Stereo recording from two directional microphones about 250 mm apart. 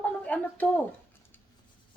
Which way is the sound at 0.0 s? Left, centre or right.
Centre.